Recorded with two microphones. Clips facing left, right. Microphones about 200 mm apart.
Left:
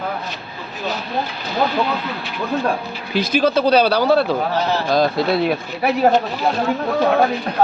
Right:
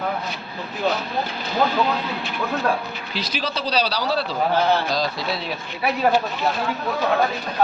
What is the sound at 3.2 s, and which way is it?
Speech, 55° left (ahead or behind).